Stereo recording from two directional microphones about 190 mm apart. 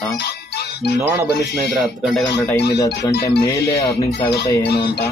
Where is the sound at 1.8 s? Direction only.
Centre (ahead or behind).